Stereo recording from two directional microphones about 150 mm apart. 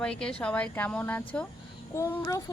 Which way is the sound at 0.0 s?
5° left (ahead or behind).